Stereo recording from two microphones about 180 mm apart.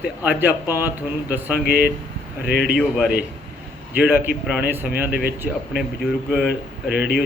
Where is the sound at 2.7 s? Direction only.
Centre (ahead or behind).